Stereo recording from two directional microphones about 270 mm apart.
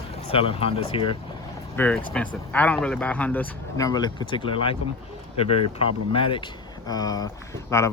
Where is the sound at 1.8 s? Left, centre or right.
Centre.